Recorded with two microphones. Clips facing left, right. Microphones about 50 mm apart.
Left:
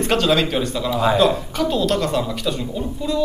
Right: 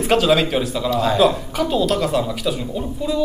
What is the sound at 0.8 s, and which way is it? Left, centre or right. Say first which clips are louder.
Speech: left 1 dB; centre.